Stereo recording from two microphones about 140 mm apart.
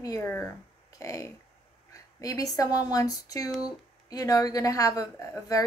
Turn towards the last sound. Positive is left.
turn(degrees=25)  # may be behind; listen again after turning